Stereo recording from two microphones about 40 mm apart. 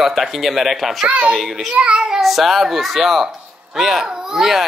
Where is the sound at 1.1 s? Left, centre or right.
Right.